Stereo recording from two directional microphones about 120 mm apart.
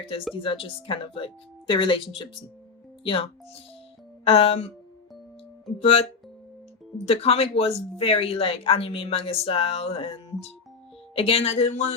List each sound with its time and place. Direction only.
0.3 s speech: 50° left (ahead or behind)
5.8 s speech: 50° left (ahead or behind)